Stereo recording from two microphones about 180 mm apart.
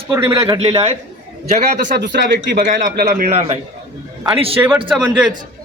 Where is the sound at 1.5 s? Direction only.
50° right (ahead or behind).